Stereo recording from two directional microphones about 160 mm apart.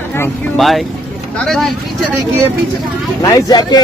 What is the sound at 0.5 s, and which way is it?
Speech, centre (ahead or behind).